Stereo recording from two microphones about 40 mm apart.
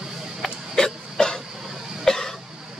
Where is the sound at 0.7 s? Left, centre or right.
Centre.